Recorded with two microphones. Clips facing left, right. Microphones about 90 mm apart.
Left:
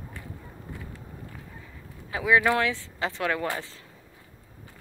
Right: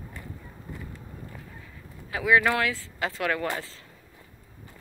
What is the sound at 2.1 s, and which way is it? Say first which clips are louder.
Speech: even; 20° left (ahead or behind).